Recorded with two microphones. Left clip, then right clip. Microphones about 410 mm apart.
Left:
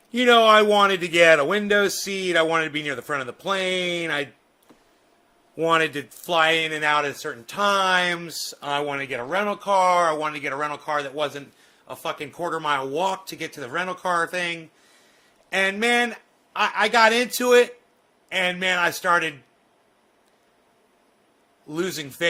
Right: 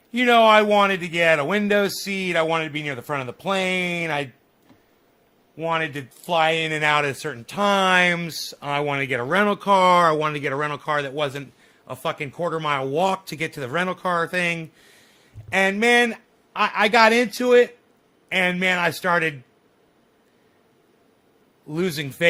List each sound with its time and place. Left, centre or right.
0.1 s speech: centre
5.5 s speech: centre; by 14.6 s right
15.4 s speech: centre
21.7 s speech: centre